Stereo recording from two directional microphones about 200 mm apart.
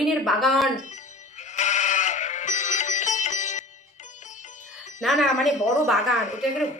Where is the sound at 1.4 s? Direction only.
35° left (ahead or behind).